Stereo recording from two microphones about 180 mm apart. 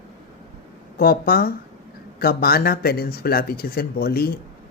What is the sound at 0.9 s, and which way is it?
Speech, 55° left (ahead or behind).